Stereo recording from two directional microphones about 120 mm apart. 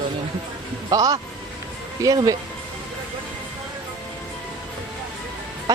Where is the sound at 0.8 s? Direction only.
30° right (ahead or behind).